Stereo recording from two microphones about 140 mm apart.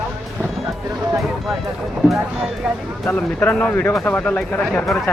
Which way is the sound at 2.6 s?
5° right (ahead or behind).